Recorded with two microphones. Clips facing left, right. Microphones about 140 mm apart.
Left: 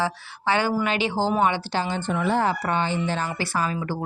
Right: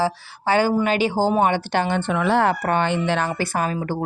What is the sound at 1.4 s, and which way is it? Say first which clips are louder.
Speech: right 3 dB; 55° right (ahead or behind).